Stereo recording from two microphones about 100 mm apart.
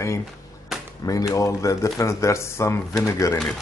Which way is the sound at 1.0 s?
35° left (ahead or behind).